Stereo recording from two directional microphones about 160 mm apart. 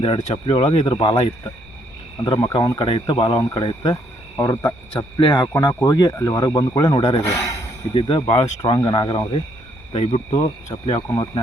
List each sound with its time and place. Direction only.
0.2 s speech: 35° left (ahead or behind)
2.2 s speech: 25° left (ahead or behind)
4.4 s speech: 20° left (ahead or behind)
7.9 s speech: 30° left (ahead or behind)